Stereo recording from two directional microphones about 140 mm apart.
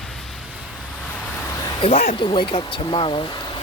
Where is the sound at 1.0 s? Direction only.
10° left (ahead or behind).